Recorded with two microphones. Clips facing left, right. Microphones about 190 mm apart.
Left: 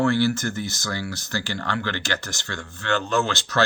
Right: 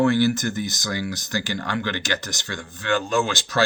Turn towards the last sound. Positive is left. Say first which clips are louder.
# right 1 dB
turn(degrees=-15)  # may be behind; listen again after turning